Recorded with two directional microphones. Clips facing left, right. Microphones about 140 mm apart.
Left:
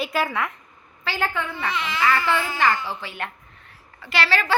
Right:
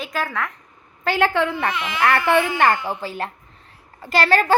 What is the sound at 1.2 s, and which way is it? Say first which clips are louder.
Speech: right 8 dB; 85° right.